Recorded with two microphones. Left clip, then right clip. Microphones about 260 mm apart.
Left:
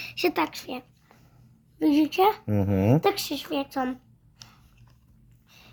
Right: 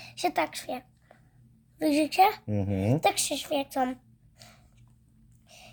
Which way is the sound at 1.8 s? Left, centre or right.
Right.